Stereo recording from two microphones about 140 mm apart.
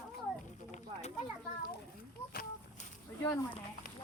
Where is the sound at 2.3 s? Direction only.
90° left.